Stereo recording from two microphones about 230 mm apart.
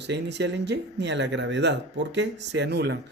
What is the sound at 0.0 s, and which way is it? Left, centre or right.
Speech, right.